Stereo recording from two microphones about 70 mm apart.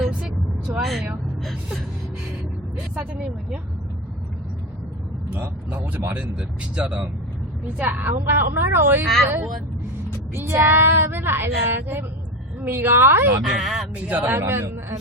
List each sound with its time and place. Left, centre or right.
0.1 s vehicle: centre
0.7 s vehicle: right
2.9 s speech: centre
5.3 s a man's voice: right
6.7 s speech: centre
7.8 s speech: right
13.4 s speech: centre
13.9 s a man's voice: right